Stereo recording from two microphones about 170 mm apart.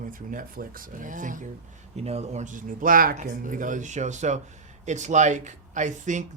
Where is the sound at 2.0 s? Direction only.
40° right (ahead or behind).